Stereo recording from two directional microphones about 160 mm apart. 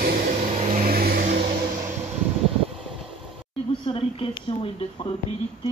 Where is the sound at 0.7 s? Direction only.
70° right (ahead or behind).